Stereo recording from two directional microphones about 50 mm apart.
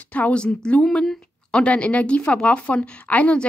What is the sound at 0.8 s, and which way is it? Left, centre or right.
A woman's voice, centre.